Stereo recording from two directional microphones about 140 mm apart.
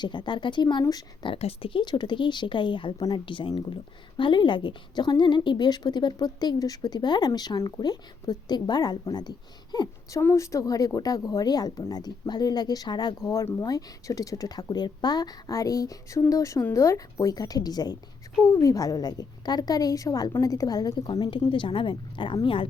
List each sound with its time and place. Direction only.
0.0 s a woman's voice: 35° left (ahead or behind)
1.3 s a woman's voice: 45° left (ahead or behind)